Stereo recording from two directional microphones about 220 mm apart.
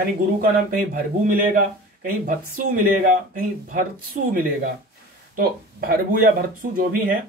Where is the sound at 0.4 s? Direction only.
40° right (ahead or behind).